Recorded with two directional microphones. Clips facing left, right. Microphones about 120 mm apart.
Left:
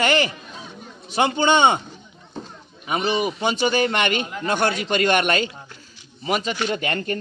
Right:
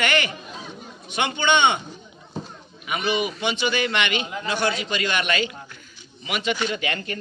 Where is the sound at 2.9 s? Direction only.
35° left (ahead or behind).